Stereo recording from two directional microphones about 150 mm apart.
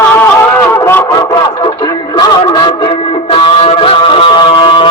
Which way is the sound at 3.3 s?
40° left (ahead or behind).